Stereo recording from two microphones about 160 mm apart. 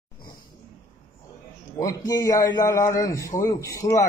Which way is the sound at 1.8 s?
20° left (ahead or behind).